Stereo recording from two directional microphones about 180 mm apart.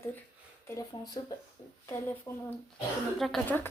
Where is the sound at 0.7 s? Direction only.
20° left (ahead or behind).